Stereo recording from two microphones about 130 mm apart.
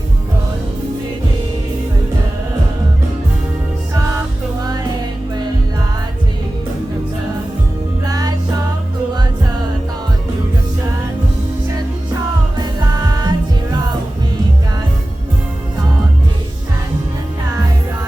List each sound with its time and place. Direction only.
4.6 s music: 30° right (ahead or behind)
8.0 s music: 30° right (ahead or behind)
12.5 s music: 30° right (ahead or behind)